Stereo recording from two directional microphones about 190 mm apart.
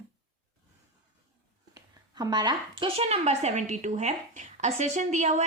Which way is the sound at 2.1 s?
20° right (ahead or behind).